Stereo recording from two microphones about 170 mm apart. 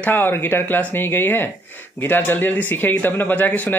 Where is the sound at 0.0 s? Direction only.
10° left (ahead or behind).